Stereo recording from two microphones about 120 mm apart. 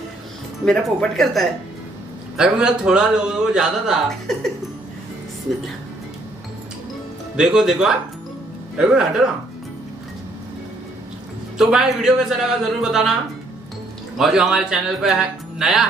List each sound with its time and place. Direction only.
0.7 s a man's voice: centre (ahead or behind)
7.3 s a man's voice: 5° right (ahead or behind)
11.5 s a man's voice: 5° right (ahead or behind)
14.1 s a man's voice: 5° right (ahead or behind)